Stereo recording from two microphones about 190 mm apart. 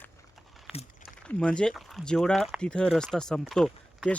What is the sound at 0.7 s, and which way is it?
Speech, centre (ahead or behind).